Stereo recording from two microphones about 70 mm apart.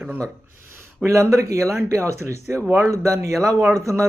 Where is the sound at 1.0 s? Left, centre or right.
Right.